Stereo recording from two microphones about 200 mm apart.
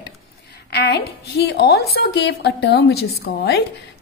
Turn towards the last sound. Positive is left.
turn(degrees=55)  # may be behind; listen again after turning